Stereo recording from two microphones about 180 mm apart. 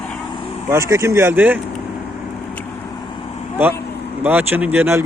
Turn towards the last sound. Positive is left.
turn(degrees=-10)  # may be behind; listen again after turning